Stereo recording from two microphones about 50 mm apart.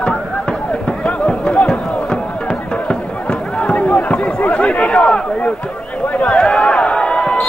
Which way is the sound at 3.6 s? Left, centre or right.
Left.